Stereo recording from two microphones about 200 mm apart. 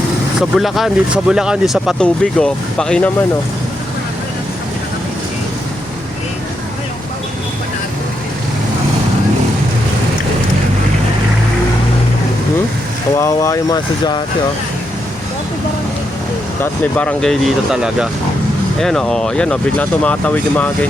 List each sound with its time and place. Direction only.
0.3 s speech: centre (ahead or behind)
13.1 s speech: 15° left (ahead or behind)
16.8 s speech: 5° left (ahead or behind)